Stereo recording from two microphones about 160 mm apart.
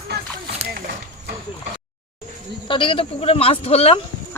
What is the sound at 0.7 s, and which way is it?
Speech, 65° right (ahead or behind).